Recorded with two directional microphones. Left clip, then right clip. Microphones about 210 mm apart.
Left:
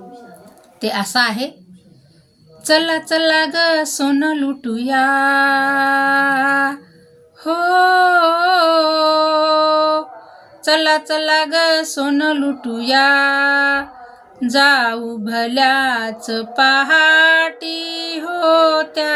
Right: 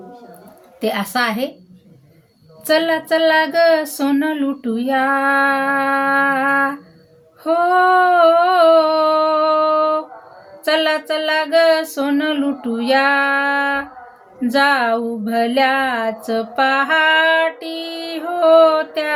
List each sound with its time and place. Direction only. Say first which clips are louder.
0.8 s music: left 2 dB; 20° left (ahead or behind)
2.6 s music: left 1 dB; 15° left (ahead or behind)
7.4 s female singing: even; 20° left (ahead or behind)
11.1 s music: left 1 dB; 20° left (ahead or behind)